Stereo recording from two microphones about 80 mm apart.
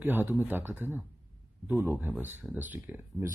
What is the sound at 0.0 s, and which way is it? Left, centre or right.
Speech, right.